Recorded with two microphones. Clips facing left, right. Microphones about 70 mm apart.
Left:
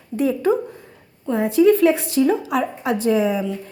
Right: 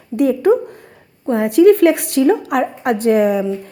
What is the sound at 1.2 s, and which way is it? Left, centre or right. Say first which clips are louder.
A woman's voice: right 5 dB; right.